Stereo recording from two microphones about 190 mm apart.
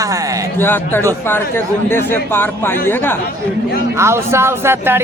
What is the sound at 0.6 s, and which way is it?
Speech, 10° left (ahead or behind).